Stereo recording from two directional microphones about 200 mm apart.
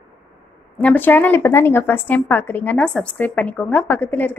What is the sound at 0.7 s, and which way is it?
A woman's voice, 10° left (ahead or behind).